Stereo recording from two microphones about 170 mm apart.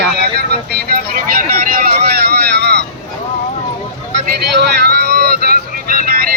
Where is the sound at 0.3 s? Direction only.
70° right (ahead or behind).